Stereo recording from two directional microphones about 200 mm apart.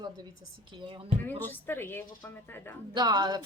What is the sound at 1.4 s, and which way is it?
A woman's voice, 10° left (ahead or behind).